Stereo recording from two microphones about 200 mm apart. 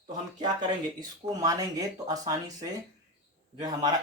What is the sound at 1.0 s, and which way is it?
Speech, 20° right (ahead or behind).